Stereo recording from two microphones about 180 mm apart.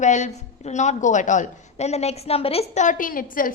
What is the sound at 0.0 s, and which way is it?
A woman's voice, 40° left (ahead or behind).